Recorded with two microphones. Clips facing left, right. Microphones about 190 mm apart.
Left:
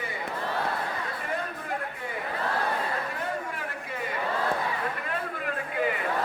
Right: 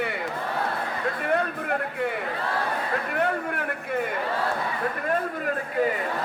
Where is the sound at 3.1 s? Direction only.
65° right (ahead or behind).